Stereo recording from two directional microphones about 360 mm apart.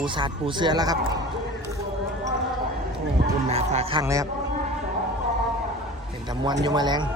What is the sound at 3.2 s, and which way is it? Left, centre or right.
Music, centre.